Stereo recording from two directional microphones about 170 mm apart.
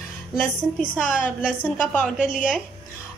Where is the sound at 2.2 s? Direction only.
50° left (ahead or behind).